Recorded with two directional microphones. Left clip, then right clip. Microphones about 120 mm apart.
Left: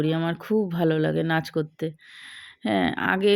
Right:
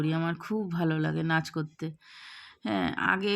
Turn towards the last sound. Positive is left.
turn(degrees=25)  # may be behind; listen again after turning